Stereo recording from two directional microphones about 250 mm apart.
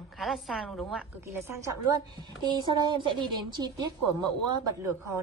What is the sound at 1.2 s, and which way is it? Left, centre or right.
A woman's voice, centre.